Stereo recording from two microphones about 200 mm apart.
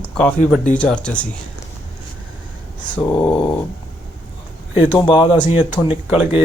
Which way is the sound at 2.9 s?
10° left (ahead or behind).